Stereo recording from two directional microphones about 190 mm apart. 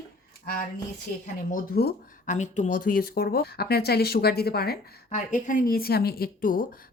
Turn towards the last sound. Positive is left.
turn(degrees=45)  # may be behind; listen again after turning